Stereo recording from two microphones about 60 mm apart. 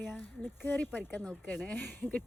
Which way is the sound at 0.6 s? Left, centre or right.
Left.